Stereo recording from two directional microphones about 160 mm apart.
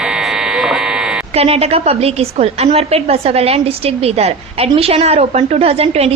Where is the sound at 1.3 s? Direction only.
40° right (ahead or behind).